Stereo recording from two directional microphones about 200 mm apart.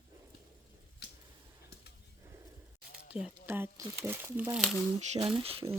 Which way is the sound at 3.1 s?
5° right (ahead or behind).